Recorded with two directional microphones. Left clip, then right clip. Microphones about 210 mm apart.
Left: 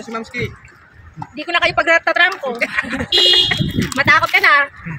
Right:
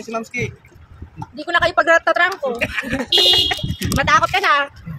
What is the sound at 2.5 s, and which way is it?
Speech, 30° right (ahead or behind).